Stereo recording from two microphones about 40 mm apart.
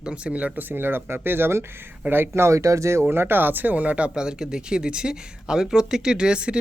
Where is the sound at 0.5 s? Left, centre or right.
Right.